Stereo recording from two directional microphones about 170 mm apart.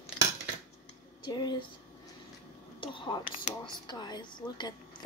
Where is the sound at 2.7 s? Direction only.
30° left (ahead or behind).